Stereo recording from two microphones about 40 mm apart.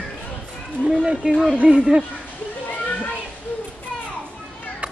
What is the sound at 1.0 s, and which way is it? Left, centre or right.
Speech, right.